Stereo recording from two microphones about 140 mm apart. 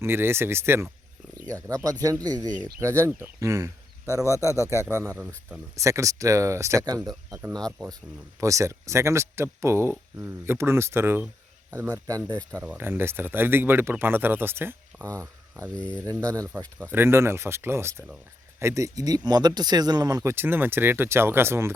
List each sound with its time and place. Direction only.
0.0 s speech: 15° right (ahead or behind)
2.5 s speech: 65° right (ahead or behind)
3.1 s speech: 20° right (ahead or behind)
7.3 s speech: 15° right (ahead or behind)
12.5 s speech: 15° right (ahead or behind)
15.7 s speech: 10° left (ahead or behind)
16.2 s speech: 25° right (ahead or behind)
20.3 s speech: 15° right (ahead or behind)